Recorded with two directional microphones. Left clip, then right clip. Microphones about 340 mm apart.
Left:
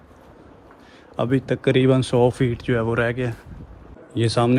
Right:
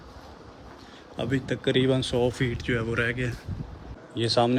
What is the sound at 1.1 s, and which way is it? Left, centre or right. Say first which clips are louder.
A man's voice: left 7 dB; centre.